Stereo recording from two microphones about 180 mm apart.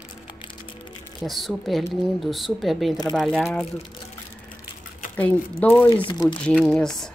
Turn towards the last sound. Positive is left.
turn(degrees=5)  # may be behind; listen again after turning